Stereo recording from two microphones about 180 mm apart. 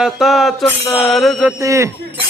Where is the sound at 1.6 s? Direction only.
15° right (ahead or behind).